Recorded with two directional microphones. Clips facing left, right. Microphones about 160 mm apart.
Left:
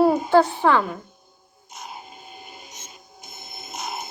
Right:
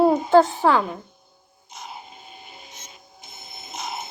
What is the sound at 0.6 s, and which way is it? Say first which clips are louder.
Speech: even; 35° right (ahead or behind).